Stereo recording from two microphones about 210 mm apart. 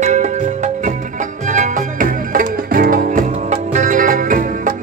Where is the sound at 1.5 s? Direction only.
40° right (ahead or behind).